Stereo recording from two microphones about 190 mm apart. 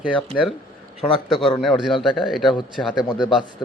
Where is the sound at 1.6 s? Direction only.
Centre (ahead or behind).